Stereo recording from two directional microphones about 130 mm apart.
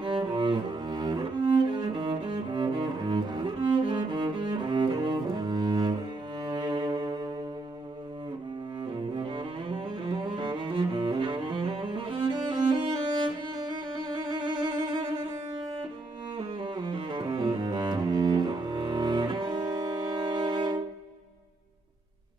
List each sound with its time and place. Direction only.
0.0 s cello: 35° right (ahead or behind)
6.4 s music: 35° right (ahead or behind)
8.8 s cello: 40° right (ahead or behind)
16.3 s cello: 35° right (ahead or behind)